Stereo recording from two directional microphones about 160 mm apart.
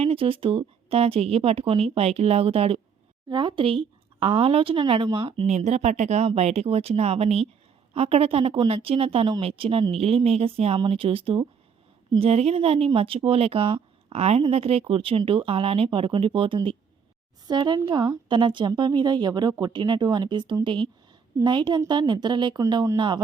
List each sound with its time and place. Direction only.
0.0 s speech: 35° right (ahead or behind)
5.5 s speech: 45° right (ahead or behind); by 23.2 s 25° right (ahead or behind)